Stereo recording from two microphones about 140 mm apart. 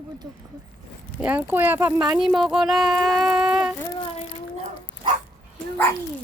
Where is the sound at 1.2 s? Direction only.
15° right (ahead or behind).